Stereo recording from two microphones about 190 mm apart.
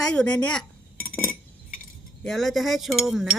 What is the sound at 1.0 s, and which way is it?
Cutlery, 50° left (ahead or behind).